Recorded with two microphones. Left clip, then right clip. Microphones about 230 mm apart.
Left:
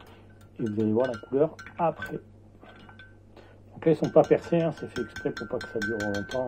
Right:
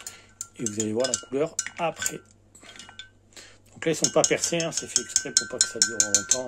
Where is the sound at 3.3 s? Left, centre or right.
Centre.